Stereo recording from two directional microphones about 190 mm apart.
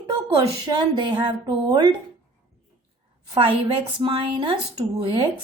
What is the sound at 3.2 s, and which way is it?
A woman's voice, 25° right (ahead or behind).